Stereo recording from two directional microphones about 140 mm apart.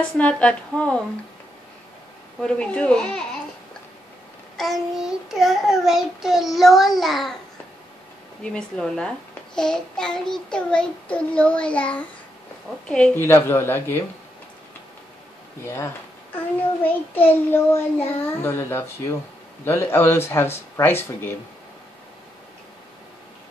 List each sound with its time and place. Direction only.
0.2 s child singing: 10° left (ahead or behind)
2.4 s child singing: 5° left (ahead or behind)
4.6 s child singing: centre (ahead or behind)
8.4 s child singing: 5° left (ahead or behind)
15.6 s child singing: 20° left (ahead or behind)